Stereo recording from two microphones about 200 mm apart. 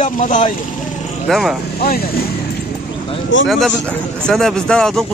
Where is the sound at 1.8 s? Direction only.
50° left (ahead or behind).